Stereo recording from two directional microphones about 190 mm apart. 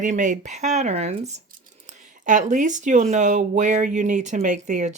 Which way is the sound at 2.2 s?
40° right (ahead or behind).